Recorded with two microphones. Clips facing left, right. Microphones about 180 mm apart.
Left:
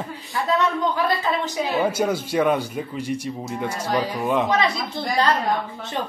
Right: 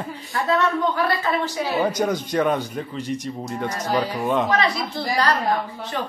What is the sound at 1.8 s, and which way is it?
A man's voice, 5° left (ahead or behind).